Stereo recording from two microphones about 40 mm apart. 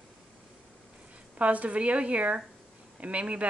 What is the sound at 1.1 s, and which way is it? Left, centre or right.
Speech, right.